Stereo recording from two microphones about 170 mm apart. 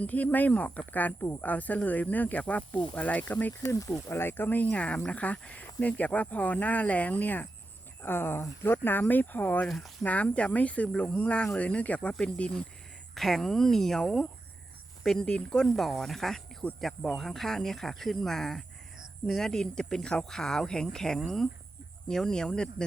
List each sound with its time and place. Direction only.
0.0 s speech: 10° left (ahead or behind)